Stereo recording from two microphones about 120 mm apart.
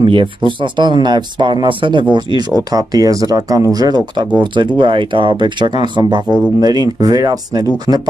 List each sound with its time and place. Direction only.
0.0 s speech: 45° right (ahead or behind)
6.2 s speech: 10° right (ahead or behind)
6.6 s speech: 35° right (ahead or behind)